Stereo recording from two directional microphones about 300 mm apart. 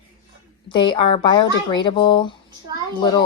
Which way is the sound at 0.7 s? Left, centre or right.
Centre.